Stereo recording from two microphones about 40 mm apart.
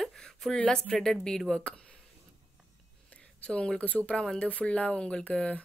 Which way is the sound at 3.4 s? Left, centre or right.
Left.